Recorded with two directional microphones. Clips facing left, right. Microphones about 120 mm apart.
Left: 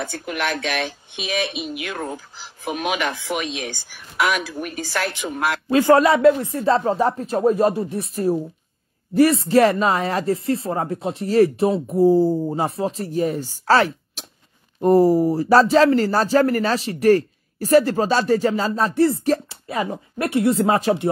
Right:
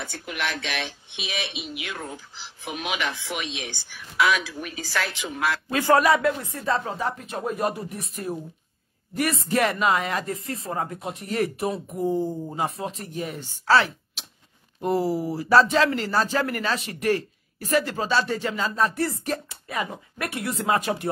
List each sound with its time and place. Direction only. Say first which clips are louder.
0.0 s speech: left 5 dB; 50° left (ahead or behind)
5.7 s speech: left 5 dB; 25° left (ahead or behind)